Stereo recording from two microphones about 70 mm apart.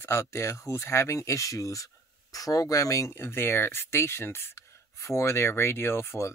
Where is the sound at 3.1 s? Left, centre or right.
Left.